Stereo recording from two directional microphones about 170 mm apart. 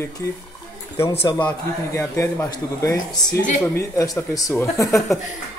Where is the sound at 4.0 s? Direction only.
20° left (ahead or behind).